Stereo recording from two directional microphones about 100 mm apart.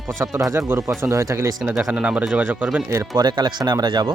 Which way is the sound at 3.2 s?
45° right (ahead or behind).